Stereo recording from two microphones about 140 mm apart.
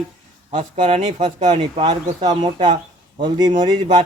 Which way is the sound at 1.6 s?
35° right (ahead or behind).